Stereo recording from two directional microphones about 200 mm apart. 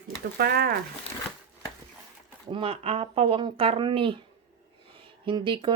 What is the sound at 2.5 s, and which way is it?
Speech, 30° right (ahead or behind).